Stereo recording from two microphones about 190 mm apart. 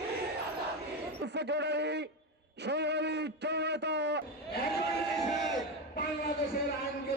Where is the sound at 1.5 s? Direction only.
65° right (ahead or behind).